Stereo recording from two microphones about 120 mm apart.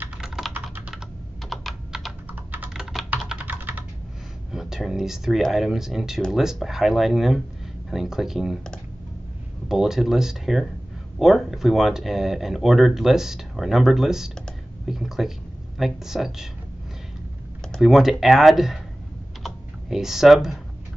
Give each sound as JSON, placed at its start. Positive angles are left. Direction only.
{"t": 0.5, "sound": "typing", "side_deg": -15}
{"t": 1.5, "sound": "computer keyboard", "side_deg": 0}
{"t": 4.5, "sound": "speech", "side_deg": -5}
{"t": 17.7, "sound": "speech", "side_deg": 0}
{"t": 19.4, "sound": "typing", "side_deg": -5}